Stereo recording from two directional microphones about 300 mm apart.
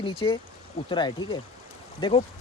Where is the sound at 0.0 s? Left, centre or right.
Centre.